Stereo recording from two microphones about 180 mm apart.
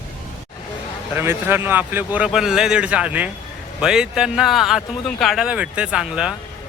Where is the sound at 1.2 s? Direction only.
10° right (ahead or behind).